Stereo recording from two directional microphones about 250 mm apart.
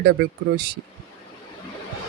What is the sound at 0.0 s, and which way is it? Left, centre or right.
Speech, right.